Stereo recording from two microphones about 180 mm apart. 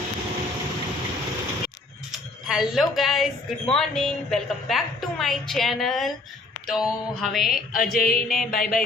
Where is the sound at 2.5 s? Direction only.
Centre (ahead or behind).